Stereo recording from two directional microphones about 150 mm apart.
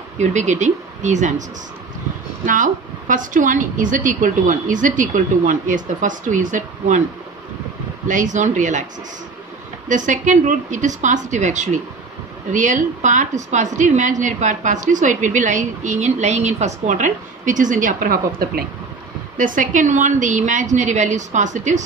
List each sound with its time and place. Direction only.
0.2 s speech: 55° right (ahead or behind)
2.4 s a woman's voice: 60° right (ahead or behind)
8.1 s a woman's voice: 55° right (ahead or behind)
9.8 s a woman's voice: 55° right (ahead or behind); by 18.6 s 80° right
19.3 s a woman's voice: 60° right (ahead or behind)